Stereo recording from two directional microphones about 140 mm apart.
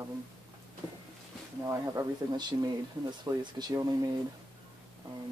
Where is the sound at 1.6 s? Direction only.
25° right (ahead or behind).